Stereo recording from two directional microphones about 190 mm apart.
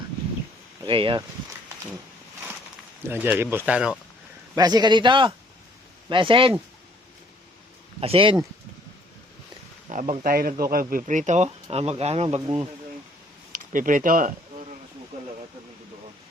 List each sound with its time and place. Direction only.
0.9 s a man's voice: 25° right (ahead or behind)
3.1 s speech: 10° right (ahead or behind)
4.5 s a man's voice: 20° right (ahead or behind)
8.0 s a man's voice: 30° right (ahead or behind)
9.9 s speech: 45° right (ahead or behind)
13.5 s a sound: 45° right (ahead or behind)